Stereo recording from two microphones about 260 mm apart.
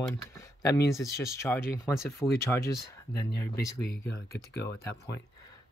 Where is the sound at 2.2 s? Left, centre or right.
Centre.